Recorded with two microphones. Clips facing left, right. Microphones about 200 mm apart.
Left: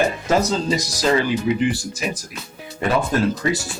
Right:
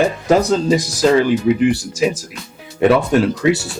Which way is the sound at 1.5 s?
65° right (ahead or behind).